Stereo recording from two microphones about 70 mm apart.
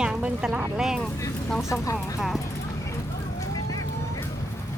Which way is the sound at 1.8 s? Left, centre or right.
Left.